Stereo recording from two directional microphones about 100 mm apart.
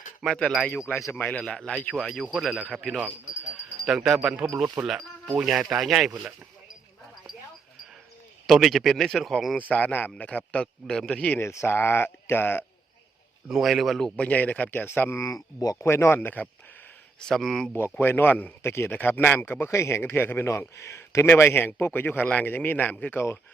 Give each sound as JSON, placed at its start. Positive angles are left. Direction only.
{"t": 0.2, "sound": "speech", "side_deg": 5}
{"t": 1.1, "sound": "a man's voice", "side_deg": 15}
{"t": 8.4, "sound": "speech", "side_deg": 0}
{"t": 9.6, "sound": "a man's voice", "side_deg": 15}
{"t": 11.3, "sound": "a man's voice", "side_deg": 25}
{"t": 13.5, "sound": "a man's voice", "side_deg": -5}
{"t": 15.9, "sound": "a man's voice", "side_deg": 25}
{"t": 17.2, "sound": "speech", "side_deg": 5}
{"t": 18.0, "sound": "a man's voice", "side_deg": 20}